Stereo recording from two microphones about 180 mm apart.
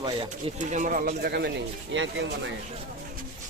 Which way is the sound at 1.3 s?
75° right (ahead or behind).